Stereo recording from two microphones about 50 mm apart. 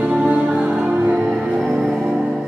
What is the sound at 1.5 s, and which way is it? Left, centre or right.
Music, centre.